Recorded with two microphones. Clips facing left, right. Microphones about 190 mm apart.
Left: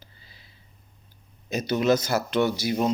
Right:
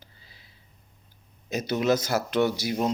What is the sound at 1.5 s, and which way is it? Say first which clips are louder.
Speech: left 2 dB; 5° right (ahead or behind).